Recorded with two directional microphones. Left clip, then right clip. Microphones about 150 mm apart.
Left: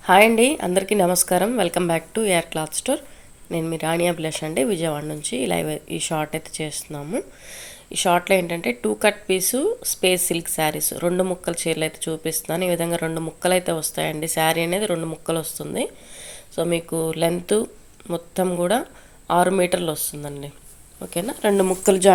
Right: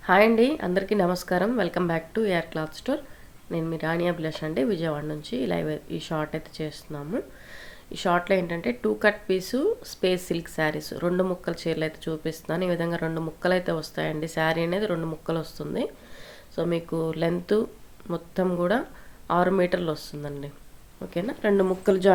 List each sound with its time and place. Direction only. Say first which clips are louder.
0.0 s a woman's voice: left 5 dB; 20° left (ahead or behind)